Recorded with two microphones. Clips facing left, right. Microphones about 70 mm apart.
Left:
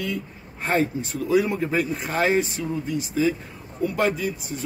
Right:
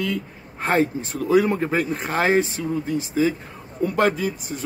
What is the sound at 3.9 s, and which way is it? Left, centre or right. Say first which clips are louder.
Speech: right 3 dB; right.